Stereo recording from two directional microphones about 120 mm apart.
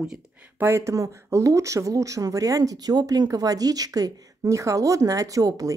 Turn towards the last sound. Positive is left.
turn(degrees=-30)  # may be behind; listen again after turning